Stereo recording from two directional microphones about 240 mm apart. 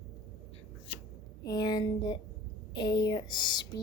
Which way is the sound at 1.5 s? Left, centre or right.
Centre.